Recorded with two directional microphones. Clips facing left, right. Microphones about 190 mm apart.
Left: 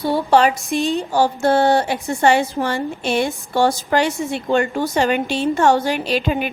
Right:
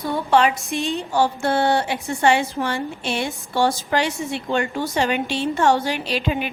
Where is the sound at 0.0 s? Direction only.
35° left (ahead or behind).